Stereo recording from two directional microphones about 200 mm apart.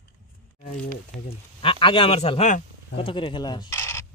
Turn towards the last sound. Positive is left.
turn(degrees=15)  # may be behind; listen again after turning